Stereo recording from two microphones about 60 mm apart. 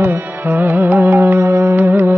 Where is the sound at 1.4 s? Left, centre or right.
Right.